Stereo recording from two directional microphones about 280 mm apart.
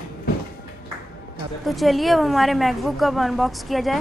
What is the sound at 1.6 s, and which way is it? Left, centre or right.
A woman's voice, centre.